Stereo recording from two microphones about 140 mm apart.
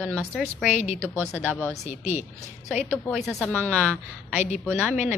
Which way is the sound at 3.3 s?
5° left (ahead or behind).